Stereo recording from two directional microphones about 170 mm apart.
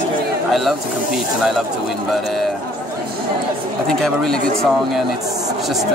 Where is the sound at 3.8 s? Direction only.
5° left (ahead or behind).